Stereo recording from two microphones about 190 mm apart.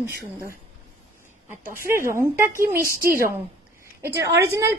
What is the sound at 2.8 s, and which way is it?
Speech, 50° right (ahead or behind).